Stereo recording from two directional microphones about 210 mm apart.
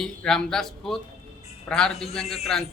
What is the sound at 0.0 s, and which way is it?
A man's voice, centre (ahead or behind).